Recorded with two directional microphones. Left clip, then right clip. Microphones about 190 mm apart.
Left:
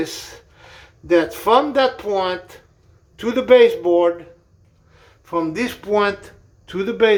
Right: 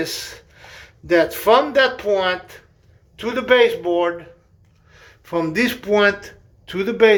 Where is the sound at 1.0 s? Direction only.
10° left (ahead or behind).